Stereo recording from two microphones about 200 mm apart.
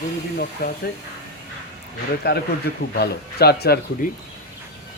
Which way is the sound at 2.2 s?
55° left (ahead or behind).